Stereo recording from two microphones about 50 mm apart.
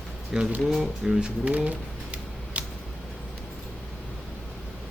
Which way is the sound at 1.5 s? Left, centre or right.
Right.